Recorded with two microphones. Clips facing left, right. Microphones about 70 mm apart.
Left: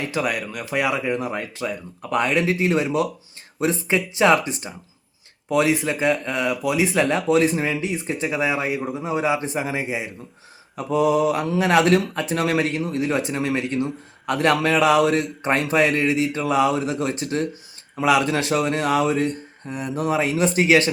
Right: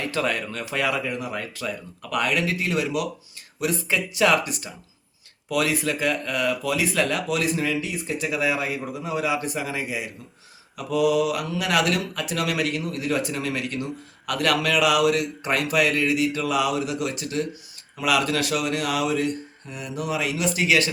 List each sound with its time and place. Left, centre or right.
0.1 s speech: centre; by 20.9 s left